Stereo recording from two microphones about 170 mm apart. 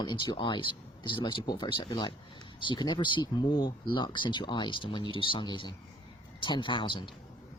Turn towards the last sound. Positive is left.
turn(degrees=30)  # may be behind; listen again after turning